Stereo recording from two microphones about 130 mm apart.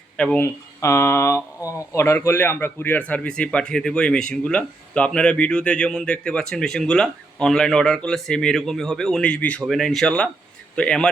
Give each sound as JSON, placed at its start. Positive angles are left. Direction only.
{"t": 0.2, "sound": "speech", "side_deg": 10}
{"t": 0.4, "sound": "speech", "side_deg": 20}